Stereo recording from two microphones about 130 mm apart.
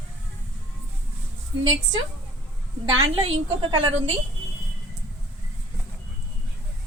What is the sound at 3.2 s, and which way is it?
Speech, 40° right (ahead or behind).